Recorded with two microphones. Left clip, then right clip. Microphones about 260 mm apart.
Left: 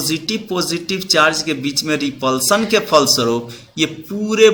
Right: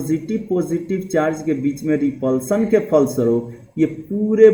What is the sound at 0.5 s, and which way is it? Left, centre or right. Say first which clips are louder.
A man's voice: even; left.